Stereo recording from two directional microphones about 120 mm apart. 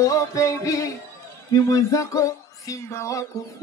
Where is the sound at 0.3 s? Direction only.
25° left (ahead or behind).